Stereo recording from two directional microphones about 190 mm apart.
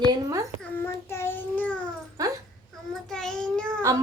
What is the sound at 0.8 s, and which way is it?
Child singing, 10° left (ahead or behind).